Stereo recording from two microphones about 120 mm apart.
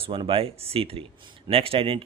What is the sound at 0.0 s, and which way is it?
Speech, 45° right (ahead or behind).